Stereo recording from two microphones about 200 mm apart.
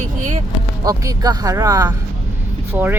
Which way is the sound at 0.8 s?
20° right (ahead or behind).